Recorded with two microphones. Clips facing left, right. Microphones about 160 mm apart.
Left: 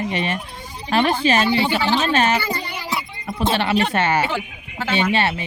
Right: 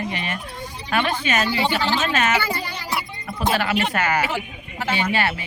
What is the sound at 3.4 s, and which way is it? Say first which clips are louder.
A woman's voice: left 2 dB; 25° left (ahead or behind).